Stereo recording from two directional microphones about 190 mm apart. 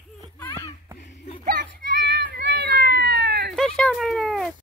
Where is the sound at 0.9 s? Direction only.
70° left (ahead or behind).